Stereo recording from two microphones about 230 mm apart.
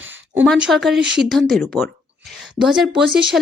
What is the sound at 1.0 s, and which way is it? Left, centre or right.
Speech, right.